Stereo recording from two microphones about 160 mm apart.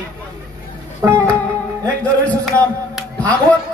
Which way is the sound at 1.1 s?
10° left (ahead or behind).